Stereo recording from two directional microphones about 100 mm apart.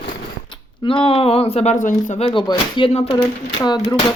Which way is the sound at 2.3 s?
55° left (ahead or behind).